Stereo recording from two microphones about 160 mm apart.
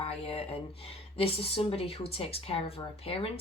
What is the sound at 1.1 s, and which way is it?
Speech, 35° left (ahead or behind).